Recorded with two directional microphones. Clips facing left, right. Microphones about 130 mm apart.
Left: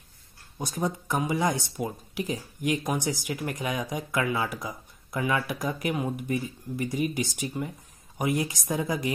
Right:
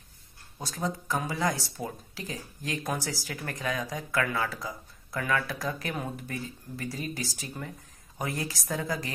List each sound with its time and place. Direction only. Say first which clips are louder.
0.6 s speech: left 3 dB; 20° left (ahead or behind)